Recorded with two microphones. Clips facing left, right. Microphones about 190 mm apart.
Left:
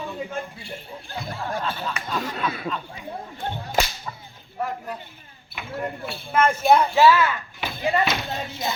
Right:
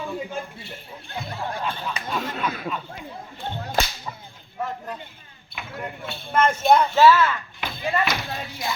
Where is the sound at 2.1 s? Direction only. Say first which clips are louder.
Even; centre (ahead or behind).